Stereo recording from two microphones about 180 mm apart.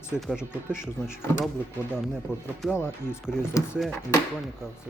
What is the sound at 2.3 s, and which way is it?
Speech, 15° left (ahead or behind).